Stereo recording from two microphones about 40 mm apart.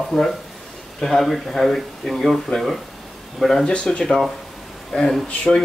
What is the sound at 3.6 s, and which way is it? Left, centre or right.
Speech, left.